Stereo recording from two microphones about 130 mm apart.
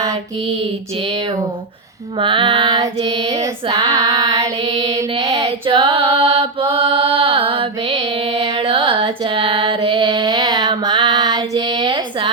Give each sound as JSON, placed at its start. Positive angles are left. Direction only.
{"t": 0.9, "sound": "female singing", "side_deg": -40}
{"t": 5.6, "sound": "chant", "side_deg": -40}
{"t": 8.5, "sound": "a sound", "side_deg": -45}